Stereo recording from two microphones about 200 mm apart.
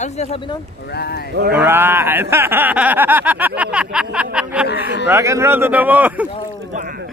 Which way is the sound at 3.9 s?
5° right (ahead or behind).